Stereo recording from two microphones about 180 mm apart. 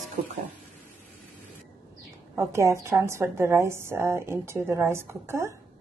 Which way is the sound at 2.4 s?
15° right (ahead or behind).